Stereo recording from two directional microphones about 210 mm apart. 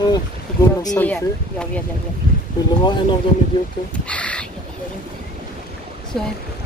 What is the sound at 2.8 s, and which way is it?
Speech, 20° left (ahead or behind).